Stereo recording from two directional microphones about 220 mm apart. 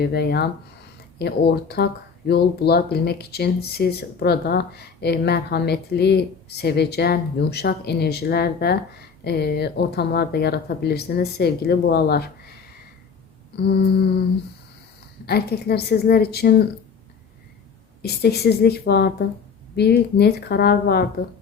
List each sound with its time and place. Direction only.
0.0 s speech: 45° left (ahead or behind)
13.6 s speech: 50° left (ahead or behind)
15.3 s speech: 45° left (ahead or behind)
18.0 s speech: 45° left (ahead or behind)